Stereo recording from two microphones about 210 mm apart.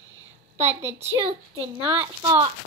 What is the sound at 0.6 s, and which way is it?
Speech, 30° right (ahead or behind).